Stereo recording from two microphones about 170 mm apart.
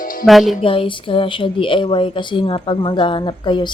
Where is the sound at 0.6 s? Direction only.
30° left (ahead or behind).